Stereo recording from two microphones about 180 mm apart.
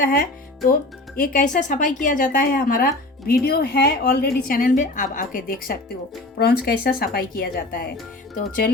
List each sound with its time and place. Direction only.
0.0 s speech: 50° left (ahead or behind)